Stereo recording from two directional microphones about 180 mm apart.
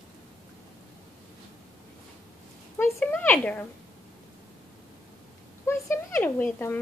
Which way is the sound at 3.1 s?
10° left (ahead or behind).